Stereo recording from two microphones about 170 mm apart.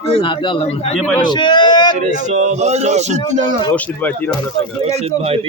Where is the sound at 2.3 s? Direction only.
45° right (ahead or behind).